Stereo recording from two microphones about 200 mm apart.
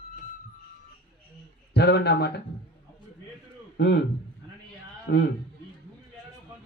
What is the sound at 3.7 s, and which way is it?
Speech, 60° left (ahead or behind).